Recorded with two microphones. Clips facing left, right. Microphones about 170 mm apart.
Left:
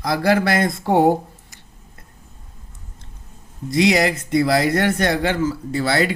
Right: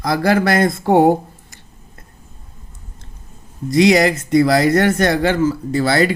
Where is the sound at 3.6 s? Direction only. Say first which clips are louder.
Right 4 dB; 45° right (ahead or behind).